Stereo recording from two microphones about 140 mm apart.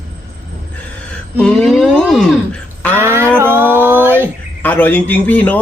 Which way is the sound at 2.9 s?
15° right (ahead or behind).